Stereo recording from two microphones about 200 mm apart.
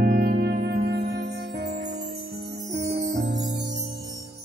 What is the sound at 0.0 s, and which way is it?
Music, 55° right (ahead or behind).